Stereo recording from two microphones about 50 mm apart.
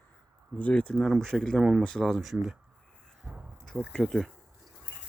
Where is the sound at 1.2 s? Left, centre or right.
Centre.